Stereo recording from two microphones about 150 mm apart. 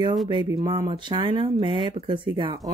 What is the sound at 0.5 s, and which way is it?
Speech, 25° right (ahead or behind).